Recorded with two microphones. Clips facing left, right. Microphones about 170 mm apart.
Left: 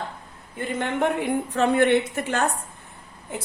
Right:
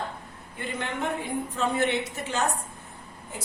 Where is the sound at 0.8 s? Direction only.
65° left (ahead or behind).